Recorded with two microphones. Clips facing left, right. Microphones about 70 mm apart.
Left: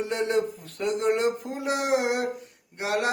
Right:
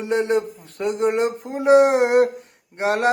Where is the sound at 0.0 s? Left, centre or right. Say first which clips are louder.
Right 5 dB; right.